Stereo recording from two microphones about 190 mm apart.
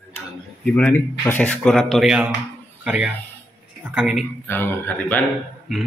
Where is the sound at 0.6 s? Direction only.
5° left (ahead or behind).